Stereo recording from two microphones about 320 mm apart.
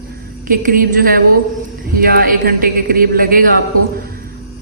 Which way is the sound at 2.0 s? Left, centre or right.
Right.